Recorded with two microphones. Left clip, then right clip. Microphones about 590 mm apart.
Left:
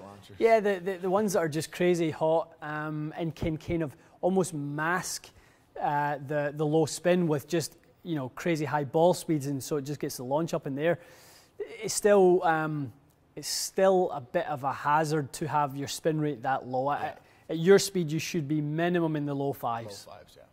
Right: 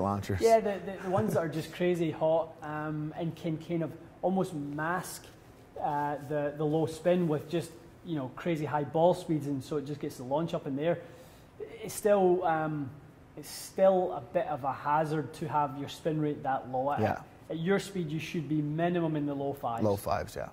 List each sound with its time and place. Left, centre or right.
0.0 s a man's voice: right
0.4 s speech: left
19.9 s speech: right